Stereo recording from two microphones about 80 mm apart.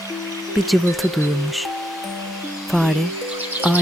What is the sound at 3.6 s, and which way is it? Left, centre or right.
Music, centre.